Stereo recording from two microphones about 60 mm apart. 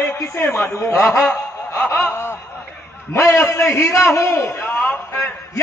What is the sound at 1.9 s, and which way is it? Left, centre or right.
Snicker, left.